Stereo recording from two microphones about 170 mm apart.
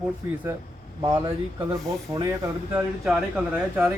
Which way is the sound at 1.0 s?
20° right (ahead or behind).